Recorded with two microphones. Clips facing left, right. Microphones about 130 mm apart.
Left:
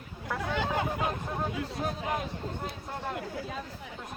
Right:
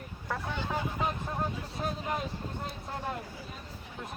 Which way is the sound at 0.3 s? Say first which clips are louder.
Left 5 dB; 90° left.